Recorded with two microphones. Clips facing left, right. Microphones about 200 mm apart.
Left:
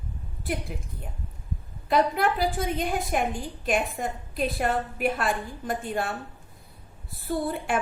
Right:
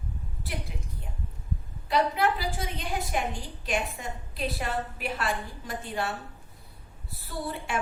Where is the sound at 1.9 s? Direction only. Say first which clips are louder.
Left 2 dB; 50° left (ahead or behind).